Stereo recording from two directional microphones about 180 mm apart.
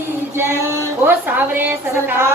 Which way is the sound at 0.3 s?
15° right (ahead or behind).